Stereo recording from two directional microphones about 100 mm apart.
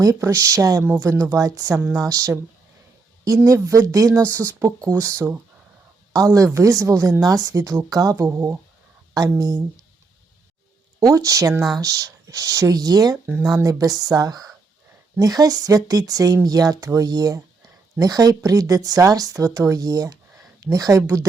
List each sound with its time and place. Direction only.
0.0 s a woman's voice: 30° right (ahead or behind)
11.0 s a woman's voice: 35° right (ahead or behind)